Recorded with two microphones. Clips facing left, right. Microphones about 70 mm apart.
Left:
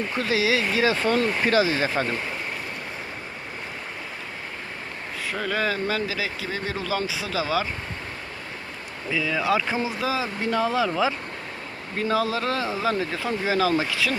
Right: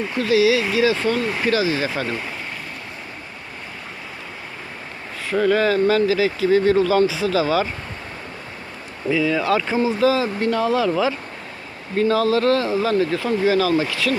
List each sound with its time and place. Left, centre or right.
0.2 s speech: left
1.2 s speech: centre
1.5 s speech: left
5.3 s speech: centre
9.0 s speech: centre
10.0 s speech: centre
11.9 s speech: centre
13.7 s speech: centre